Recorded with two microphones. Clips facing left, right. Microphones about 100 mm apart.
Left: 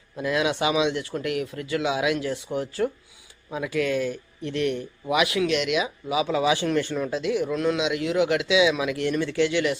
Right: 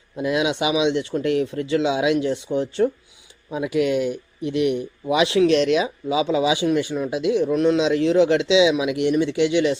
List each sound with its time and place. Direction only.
0.2 s speech: 20° right (ahead or behind)
5.1 s speech: 25° right (ahead or behind)